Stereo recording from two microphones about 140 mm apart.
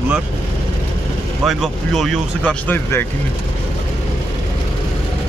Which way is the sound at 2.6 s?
15° left (ahead or behind).